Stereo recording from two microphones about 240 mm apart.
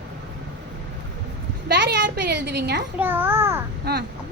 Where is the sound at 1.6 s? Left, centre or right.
Right.